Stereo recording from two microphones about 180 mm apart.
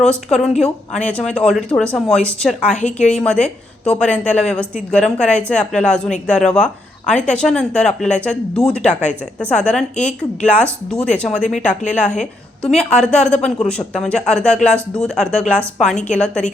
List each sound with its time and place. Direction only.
0.0 s speech: 5° left (ahead or behind)
8.9 s speech: 40° left (ahead or behind)
9.4 s speech: 5° left (ahead or behind)